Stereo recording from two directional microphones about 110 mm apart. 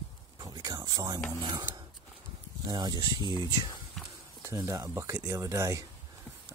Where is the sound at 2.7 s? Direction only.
40° right (ahead or behind).